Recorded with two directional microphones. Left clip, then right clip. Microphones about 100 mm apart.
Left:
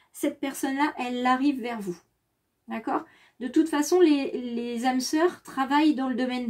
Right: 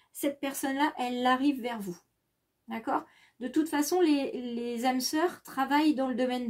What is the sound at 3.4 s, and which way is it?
A woman's voice, 25° right (ahead or behind).